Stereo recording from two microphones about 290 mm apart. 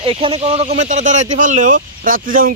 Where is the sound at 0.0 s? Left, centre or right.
Centre.